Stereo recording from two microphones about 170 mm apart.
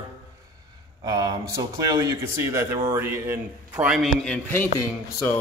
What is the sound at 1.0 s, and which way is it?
A man's voice, 20° right (ahead or behind).